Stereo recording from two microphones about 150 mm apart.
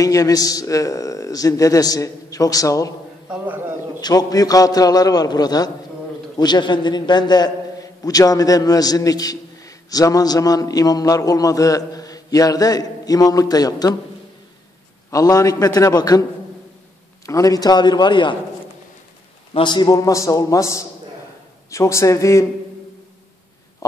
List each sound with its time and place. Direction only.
0.0 s a man's voice: 25° left (ahead or behind)
3.3 s a sound: 10° right (ahead or behind)
4.0 s a man's voice: 25° left (ahead or behind)
15.0 s a man's voice: 25° left (ahead or behind)
17.3 s a man's voice: 25° left (ahead or behind)
19.5 s a man's voice: 30° left (ahead or behind)
23.8 s a sound: 20° left (ahead or behind)